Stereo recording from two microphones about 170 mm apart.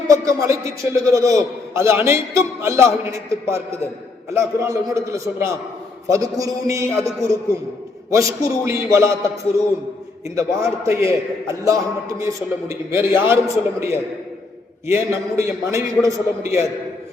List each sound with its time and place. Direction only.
0.1 s a man's voice: 20° right (ahead or behind)